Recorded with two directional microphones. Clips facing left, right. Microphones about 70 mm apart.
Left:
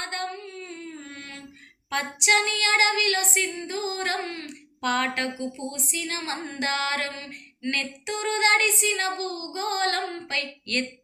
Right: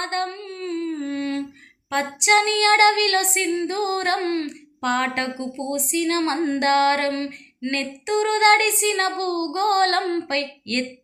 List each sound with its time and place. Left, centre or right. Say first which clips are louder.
0.0 s a sound: right 6 dB; right
1.9 s a woman's voice: right 4 dB; right
4.8 s a woman's voice: right 3 dB; right
7.7 s a woman's voice: right 6 dB; right
10.2 s a woman's voice: right 6 dB; right